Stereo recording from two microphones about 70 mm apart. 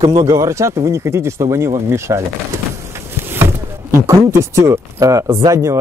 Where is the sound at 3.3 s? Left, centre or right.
Right.